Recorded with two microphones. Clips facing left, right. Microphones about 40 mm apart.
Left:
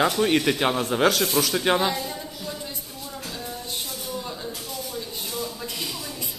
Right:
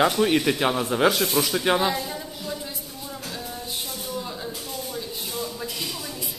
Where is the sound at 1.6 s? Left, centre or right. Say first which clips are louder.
Even; centre.